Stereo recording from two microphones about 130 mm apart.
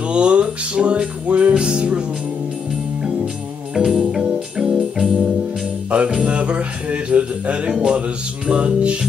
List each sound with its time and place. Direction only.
0.1 s music: 10° right (ahead or behind)
3.7 s music: 5° right (ahead or behind)